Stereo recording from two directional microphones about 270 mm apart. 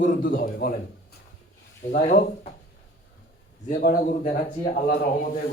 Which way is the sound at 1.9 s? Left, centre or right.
Left.